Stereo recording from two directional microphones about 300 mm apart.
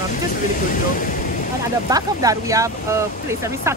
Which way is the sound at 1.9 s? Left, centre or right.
Centre.